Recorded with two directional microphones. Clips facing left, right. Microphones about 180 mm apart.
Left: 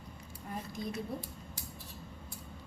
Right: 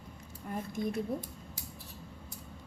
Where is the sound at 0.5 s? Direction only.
50° right (ahead or behind).